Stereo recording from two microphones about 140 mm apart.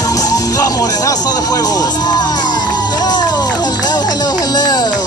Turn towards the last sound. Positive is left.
turn(degrees=30)  # may be behind; listen again after turning